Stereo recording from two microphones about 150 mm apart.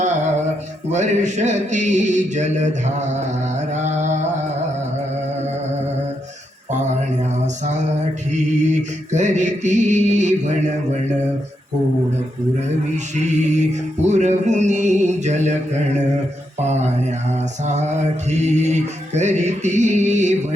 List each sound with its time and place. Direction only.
0.9 s mantra: 50° right (ahead or behind)
8.3 s mantra: 55° right (ahead or behind)
13.1 s mantra: 50° right (ahead or behind)
18.3 s mantra: 50° right (ahead or behind)